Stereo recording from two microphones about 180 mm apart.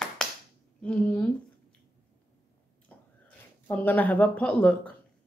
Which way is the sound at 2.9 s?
10° left (ahead or behind).